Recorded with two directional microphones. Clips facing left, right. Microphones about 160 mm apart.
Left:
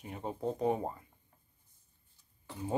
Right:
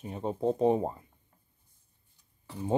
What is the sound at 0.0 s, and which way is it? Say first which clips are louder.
Speech: right 6 dB; 25° right (ahead or behind).